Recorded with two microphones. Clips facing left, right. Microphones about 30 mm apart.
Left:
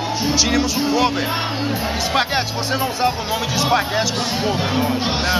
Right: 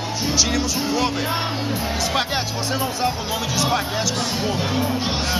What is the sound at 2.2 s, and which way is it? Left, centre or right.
Speech, centre.